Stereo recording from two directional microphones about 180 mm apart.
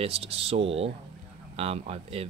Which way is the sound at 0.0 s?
30° right (ahead or behind).